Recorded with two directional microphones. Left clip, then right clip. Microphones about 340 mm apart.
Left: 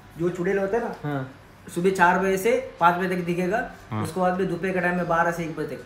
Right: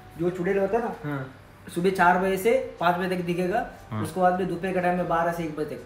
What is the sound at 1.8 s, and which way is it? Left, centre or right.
Speech, centre.